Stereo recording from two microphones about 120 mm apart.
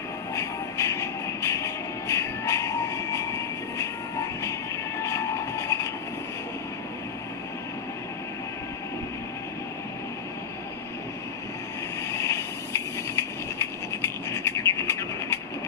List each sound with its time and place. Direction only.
0.3 s train: 25° left (ahead or behind)
5.0 s train: 25° left (ahead or behind)
12.1 s vehicle: 25° left (ahead or behind)
14.3 s bird: 25° left (ahead or behind)